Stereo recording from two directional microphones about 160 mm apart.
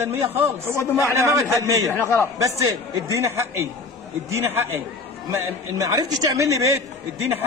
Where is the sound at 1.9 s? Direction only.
15° left (ahead or behind).